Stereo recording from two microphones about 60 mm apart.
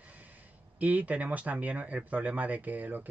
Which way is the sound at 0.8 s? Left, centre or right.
Right.